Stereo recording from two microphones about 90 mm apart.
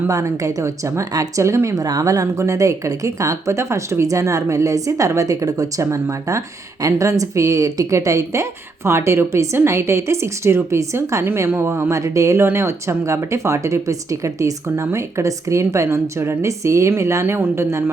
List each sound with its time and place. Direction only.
0.1 s a woman's voice: 40° right (ahead or behind)